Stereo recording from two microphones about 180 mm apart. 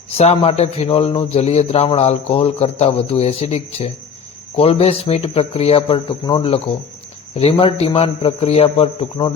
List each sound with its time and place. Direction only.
0.1 s a man's voice: 35° left (ahead or behind)